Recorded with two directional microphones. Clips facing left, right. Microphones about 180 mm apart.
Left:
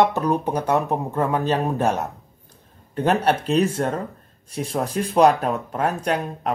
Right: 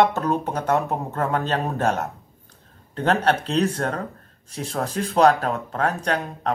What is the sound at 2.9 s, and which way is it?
Speech, 10° left (ahead or behind).